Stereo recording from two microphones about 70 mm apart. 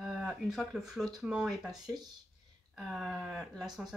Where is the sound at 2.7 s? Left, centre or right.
Centre.